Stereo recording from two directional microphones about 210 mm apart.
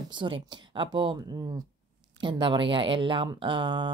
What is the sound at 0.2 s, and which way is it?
Speech, 25° right (ahead or behind).